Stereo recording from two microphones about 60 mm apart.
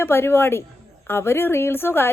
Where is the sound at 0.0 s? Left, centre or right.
Left.